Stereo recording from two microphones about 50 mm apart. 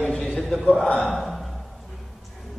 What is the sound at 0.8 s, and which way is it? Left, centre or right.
Speech, left.